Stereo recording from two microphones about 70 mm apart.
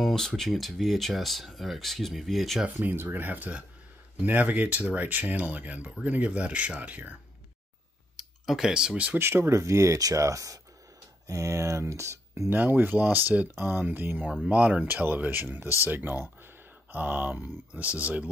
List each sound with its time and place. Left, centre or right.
0.0 s speech: centre
2.6 s speech: right
8.2 s speech: centre
9.2 s speech: right
12.5 s speech: right